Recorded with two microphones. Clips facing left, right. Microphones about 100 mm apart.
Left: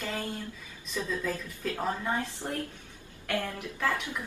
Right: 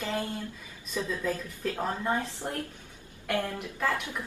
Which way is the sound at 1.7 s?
20° right (ahead or behind).